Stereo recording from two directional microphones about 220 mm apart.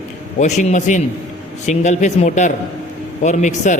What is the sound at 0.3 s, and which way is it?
Speech, 30° left (ahead or behind).